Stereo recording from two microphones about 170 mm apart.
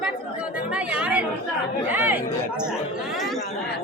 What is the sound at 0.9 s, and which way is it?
Speech, 5° right (ahead or behind).